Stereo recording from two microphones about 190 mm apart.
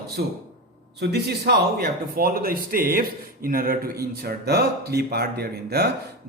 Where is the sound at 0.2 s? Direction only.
55° right (ahead or behind).